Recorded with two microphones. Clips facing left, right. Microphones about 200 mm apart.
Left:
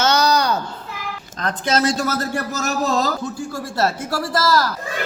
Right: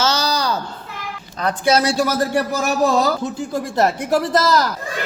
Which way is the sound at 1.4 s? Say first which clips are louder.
Right 3 dB; 10° right (ahead or behind).